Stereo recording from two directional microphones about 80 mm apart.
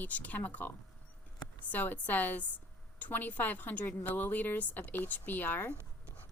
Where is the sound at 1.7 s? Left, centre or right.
Left.